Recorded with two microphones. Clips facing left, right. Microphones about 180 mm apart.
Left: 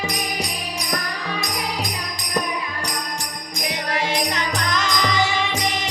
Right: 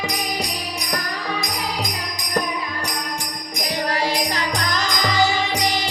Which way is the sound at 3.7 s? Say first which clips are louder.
Right 2 dB; 35° right (ahead or behind).